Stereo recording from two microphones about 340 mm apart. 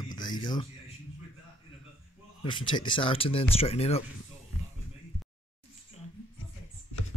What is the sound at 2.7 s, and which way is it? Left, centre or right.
Speech, centre.